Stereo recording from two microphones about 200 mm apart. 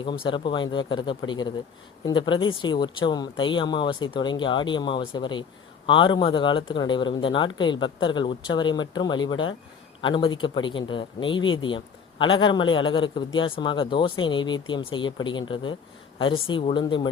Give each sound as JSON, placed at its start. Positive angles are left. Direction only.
{"t": 0.0, "sound": "speech", "side_deg": 25}